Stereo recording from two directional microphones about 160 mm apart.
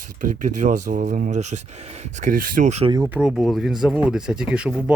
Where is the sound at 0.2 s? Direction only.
50° right (ahead or behind).